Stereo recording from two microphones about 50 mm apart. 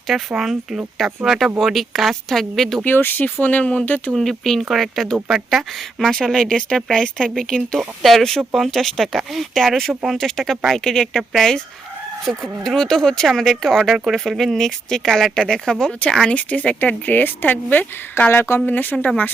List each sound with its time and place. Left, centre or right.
0.1 s speech: centre
2.8 s speech: left
3.4 s speech: left
4.1 s speech: centre
7.8 s speech: centre
13.9 s speech: centre
14.3 s speech: centre
16.3 s speech: left
18.3 s speech: left
18.6 s speech: left